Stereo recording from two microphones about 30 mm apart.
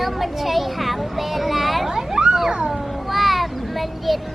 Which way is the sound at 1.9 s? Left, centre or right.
Centre.